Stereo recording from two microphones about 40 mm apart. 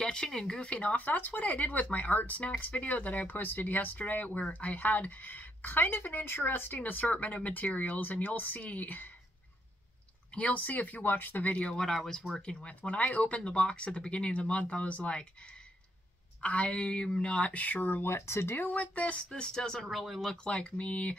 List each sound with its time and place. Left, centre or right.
0.0 s speech: centre
0.6 s speech: left
0.9 s speech: left
6.8 s speech: left
10.5 s speech: left
11.5 s speech: left
16.3 s speech: left
17.5 s speech: left
18.0 s speech: left
18.8 s speech: left
19.3 s speech: centre
19.9 s speech: centre
20.4 s speech: left